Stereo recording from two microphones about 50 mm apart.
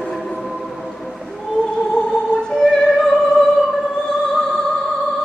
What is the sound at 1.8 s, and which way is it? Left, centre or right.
Opera, centre.